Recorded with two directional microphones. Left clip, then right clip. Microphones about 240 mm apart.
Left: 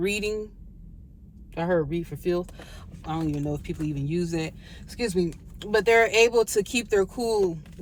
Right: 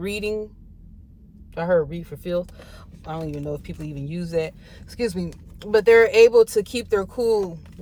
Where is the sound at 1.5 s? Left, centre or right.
Centre.